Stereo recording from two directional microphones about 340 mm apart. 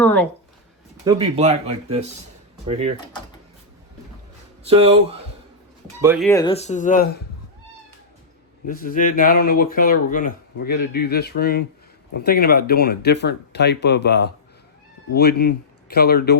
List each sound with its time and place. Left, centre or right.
0.0 s speech: centre
1.0 s speech: centre
4.6 s speech: centre
6.0 s speech: centre
6.2 s speech: centre
8.6 s speech: left